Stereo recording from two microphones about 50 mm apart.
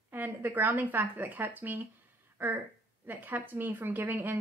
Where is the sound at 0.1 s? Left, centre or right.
Right.